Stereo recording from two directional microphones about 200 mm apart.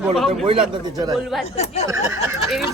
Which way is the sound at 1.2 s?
Centre (ahead or behind).